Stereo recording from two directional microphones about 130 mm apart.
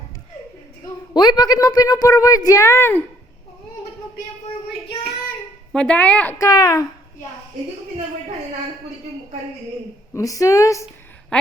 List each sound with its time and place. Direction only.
1.1 s a woman's voice: 35° left (ahead or behind)
5.7 s speech: 10° left (ahead or behind)
6.4 s a woman's voice: 25° left (ahead or behind)
10.1 s a woman's voice: 25° left (ahead or behind)